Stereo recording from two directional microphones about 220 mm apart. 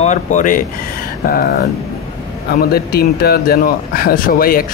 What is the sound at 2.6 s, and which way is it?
Speech, 45° left (ahead or behind).